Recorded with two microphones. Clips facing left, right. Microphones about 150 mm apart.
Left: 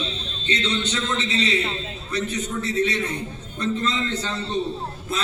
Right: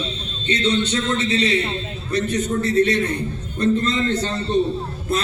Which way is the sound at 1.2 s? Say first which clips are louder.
Right 4 dB; 30° right (ahead or behind).